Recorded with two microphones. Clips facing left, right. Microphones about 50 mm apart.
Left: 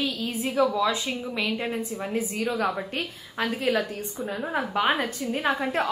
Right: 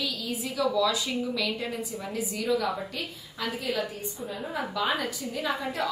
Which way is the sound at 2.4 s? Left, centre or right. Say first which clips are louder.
Right 1 dB; centre.